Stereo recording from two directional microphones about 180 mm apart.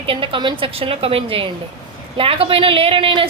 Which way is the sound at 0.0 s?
30° right (ahead or behind).